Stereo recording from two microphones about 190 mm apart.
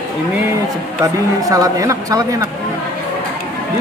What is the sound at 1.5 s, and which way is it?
Speech, 20° right (ahead or behind).